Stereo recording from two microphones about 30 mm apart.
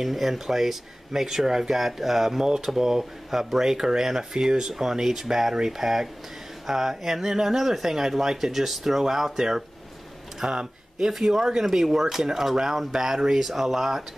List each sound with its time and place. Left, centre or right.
0.0 s speech: centre